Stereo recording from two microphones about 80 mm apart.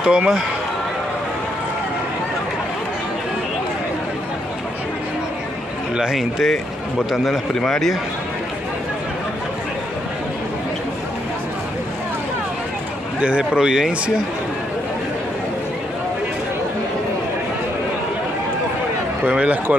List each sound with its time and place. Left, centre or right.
0.0 s a man's voice: centre
5.9 s a man's voice: centre
13.2 s a man's voice: centre
19.2 s a man's voice: centre